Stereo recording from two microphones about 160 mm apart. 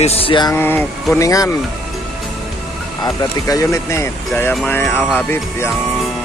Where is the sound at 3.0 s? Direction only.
20° left (ahead or behind).